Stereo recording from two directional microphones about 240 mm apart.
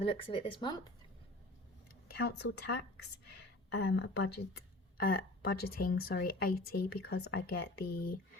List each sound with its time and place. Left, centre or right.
0.0 s speech: left
2.0 s speech: left